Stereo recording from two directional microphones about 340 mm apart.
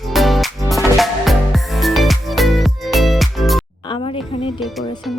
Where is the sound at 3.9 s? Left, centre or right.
Centre.